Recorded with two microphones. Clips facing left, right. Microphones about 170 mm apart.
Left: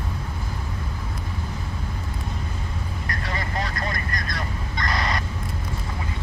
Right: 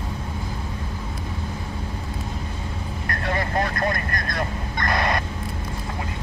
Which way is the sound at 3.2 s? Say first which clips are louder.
Right 6 dB; 55° right (ahead or behind).